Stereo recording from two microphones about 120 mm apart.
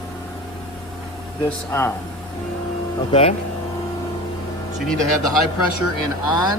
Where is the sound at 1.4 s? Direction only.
20° left (ahead or behind).